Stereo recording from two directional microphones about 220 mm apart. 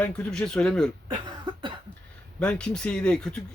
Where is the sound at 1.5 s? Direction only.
20° right (ahead or behind).